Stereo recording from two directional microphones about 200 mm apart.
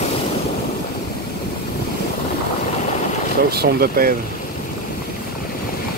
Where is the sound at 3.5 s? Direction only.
50° right (ahead or behind).